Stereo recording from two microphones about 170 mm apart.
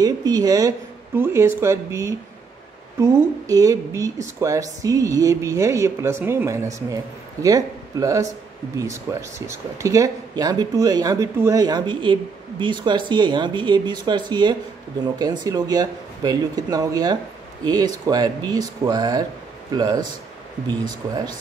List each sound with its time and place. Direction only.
0.0 s speech: 20° right (ahead or behind)